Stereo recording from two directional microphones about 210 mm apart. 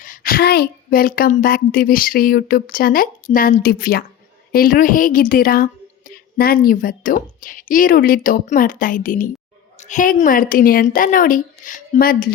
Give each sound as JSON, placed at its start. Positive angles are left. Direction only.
{"t": 0.0, "sound": "a woman's voice", "side_deg": 40}